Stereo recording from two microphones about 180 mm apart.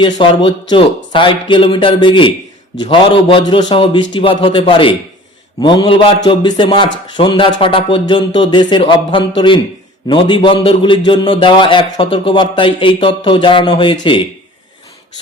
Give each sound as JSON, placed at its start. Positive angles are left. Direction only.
{"t": 0.0, "sound": "a man's voice", "side_deg": 30}